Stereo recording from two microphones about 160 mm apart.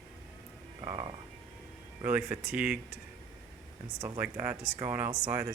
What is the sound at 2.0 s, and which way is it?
Speech, 10° right (ahead or behind).